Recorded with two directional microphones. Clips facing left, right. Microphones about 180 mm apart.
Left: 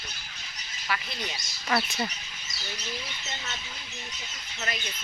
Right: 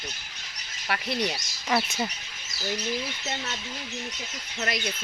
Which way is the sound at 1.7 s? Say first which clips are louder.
Right 2 dB; 20° right (ahead or behind).